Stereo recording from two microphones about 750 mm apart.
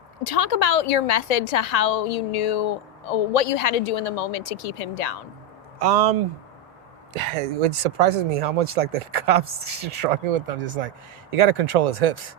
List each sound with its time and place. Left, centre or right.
0.3 s a woman's voice: left
5.8 s speech: right
7.2 s speech: right